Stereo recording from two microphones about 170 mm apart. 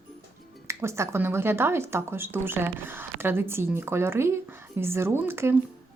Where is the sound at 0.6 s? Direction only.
15° right (ahead or behind).